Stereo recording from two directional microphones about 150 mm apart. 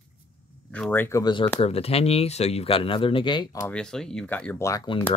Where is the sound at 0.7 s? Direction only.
5° left (ahead or behind).